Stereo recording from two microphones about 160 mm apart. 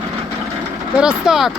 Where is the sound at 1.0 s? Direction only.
5° right (ahead or behind).